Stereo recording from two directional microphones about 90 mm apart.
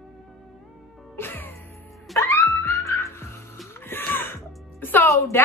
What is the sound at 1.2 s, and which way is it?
Music, 20° left (ahead or behind).